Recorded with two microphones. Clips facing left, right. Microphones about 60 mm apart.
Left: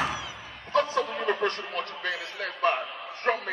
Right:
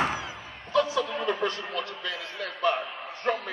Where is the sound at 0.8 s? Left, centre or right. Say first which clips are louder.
Right 1 dB; left.